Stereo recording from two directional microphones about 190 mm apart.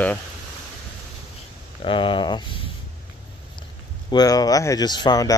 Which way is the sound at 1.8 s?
25° left (ahead or behind).